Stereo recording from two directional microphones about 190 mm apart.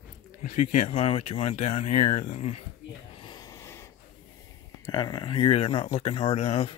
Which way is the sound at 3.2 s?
20° left (ahead or behind).